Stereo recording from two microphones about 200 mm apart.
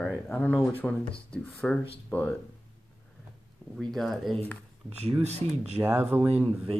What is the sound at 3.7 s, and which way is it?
Speech, centre (ahead or behind).